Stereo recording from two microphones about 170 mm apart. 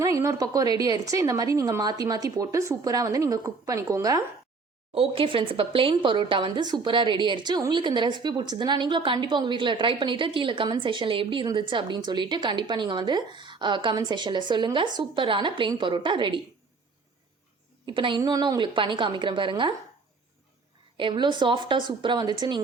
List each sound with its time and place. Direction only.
0.0 s speech: 20° right (ahead or behind)
4.9 s speech: 30° right (ahead or behind)
17.8 s speech: 30° right (ahead or behind)
21.0 s speech: 25° right (ahead or behind)